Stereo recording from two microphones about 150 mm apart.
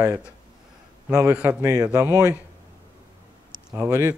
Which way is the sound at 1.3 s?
5° right (ahead or behind).